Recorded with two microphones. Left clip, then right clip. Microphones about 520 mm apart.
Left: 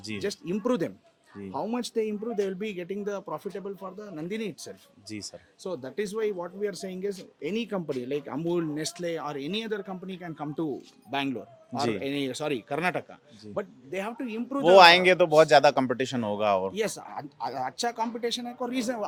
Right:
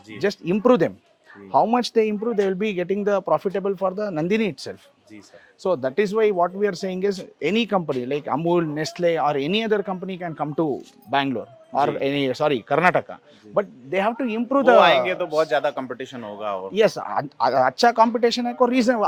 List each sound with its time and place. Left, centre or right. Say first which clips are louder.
0.2 s speech: right 11 dB; right
5.6 s speech: right 12 dB; right
14.8 s a man's voice: even; left
16.7 s speech: right 12 dB; right